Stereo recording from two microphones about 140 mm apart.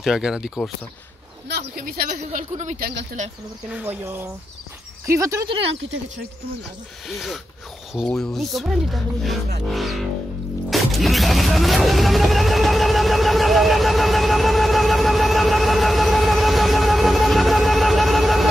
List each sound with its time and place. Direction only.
0.0 s speech: 5° right (ahead or behind)
1.8 s speech: 90° right; by 3.3 s 60° right (ahead or behind)
3.7 s speech: 15° right (ahead or behind)
7.1 s speech: centre (ahead or behind)
10.7 s music: centre (ahead or behind)